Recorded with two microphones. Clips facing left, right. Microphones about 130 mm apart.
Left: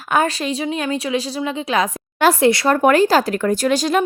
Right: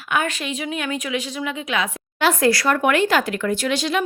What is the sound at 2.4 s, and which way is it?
A woman's voice, 25° left (ahead or behind).